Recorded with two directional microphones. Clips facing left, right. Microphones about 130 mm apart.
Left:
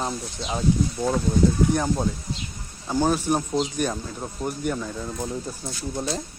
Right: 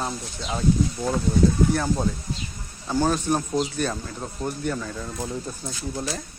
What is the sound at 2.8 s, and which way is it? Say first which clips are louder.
Speech: even; 15° left (ahead or behind).